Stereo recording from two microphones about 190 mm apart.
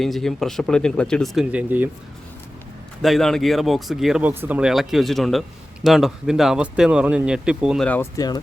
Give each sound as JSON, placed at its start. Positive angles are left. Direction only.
{"t": 0.0, "sound": "speech", "side_deg": 0}
{"t": 3.0, "sound": "speech", "side_deg": 0}
{"t": 7.9, "sound": "speech", "side_deg": 10}